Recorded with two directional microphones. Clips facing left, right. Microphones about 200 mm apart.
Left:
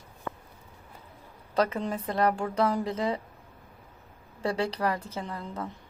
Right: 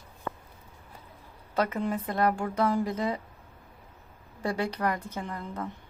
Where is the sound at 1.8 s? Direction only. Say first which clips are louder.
Right 2 dB; 10° right (ahead or behind).